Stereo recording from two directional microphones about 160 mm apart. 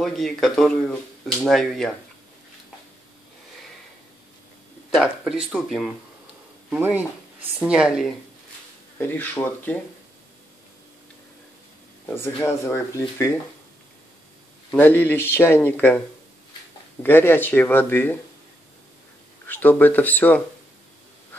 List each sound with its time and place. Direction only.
0.0 s speech: centre (ahead or behind)
4.9 s speech: centre (ahead or behind)
8.9 s speech: 15° left (ahead or behind)
12.1 s speech: 15° left (ahead or behind)
14.7 s speech: 15° left (ahead or behind)
17.0 s speech: 15° left (ahead or behind)
19.4 s speech: 10° left (ahead or behind)